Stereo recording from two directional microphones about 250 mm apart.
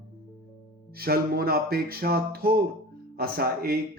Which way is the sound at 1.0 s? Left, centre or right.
Right.